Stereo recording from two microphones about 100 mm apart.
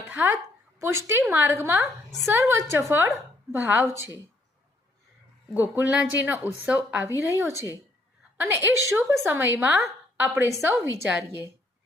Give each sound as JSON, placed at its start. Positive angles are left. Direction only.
{"t": 0.1, "sound": "a woman's voice", "side_deg": -20}
{"t": 1.2, "sound": "a woman's voice", "side_deg": -15}
{"t": 5.5, "sound": "a woman's voice", "side_deg": -15}
{"t": 7.2, "sound": "a woman's voice", "side_deg": -30}
{"t": 7.5, "sound": "a woman's voice", "side_deg": 35}
{"t": 8.4, "sound": "a woman's voice", "side_deg": -20}